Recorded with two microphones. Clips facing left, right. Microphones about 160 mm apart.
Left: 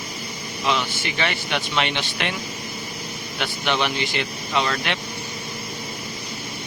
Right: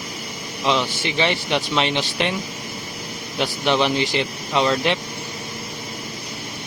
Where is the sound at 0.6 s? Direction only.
25° right (ahead or behind).